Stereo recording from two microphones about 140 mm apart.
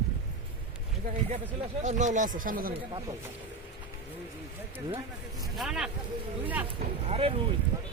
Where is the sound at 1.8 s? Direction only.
60° right (ahead or behind); by 2.7 s 85° right.